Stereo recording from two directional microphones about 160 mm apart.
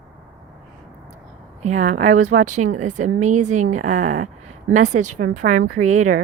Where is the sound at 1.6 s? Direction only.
50° right (ahead or behind).